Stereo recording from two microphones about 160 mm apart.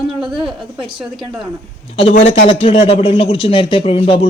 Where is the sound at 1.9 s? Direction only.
40° left (ahead or behind).